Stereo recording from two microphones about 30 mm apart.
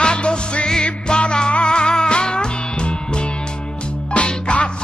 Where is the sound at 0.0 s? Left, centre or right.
Left.